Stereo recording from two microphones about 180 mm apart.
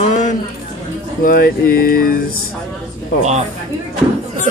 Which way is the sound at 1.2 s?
55° left (ahead or behind).